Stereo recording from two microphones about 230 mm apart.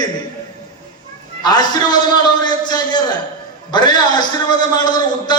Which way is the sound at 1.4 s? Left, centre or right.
Centre.